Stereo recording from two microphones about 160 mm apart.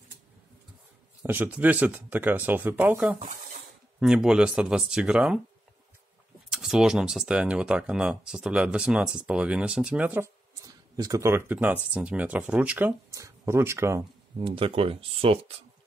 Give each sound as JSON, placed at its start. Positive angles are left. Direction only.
{"t": 1.2, "sound": "speech", "side_deg": -10}
{"t": 6.5, "sound": "speech", "side_deg": 0}
{"t": 14.4, "sound": "speech", "side_deg": -35}